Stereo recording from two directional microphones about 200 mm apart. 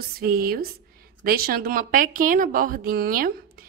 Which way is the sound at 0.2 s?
50° right (ahead or behind).